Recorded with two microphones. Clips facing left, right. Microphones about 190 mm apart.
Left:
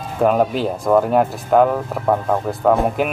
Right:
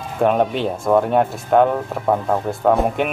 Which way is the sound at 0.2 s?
Centre (ahead or behind).